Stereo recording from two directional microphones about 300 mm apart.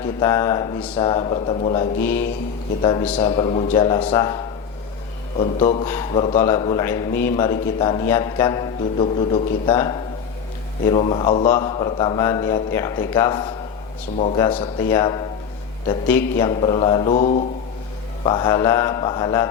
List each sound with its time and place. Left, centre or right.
0.2 s a man's voice: centre
5.4 s mantra: left
5.9 s a man's voice: centre
10.9 s mantra: left
11.5 s a man's voice: centre
16.5 s mantra: centre
18.2 s a man's voice: centre